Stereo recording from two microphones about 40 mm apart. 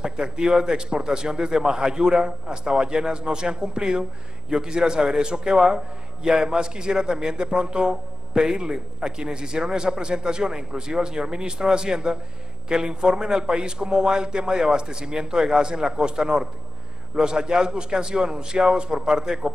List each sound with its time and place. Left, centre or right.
0.0 s a man's voice: centre